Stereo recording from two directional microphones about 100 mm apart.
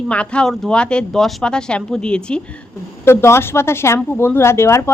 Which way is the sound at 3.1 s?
25° left (ahead or behind).